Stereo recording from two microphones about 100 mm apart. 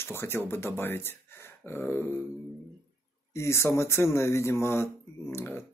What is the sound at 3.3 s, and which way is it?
Speech, 25° left (ahead or behind).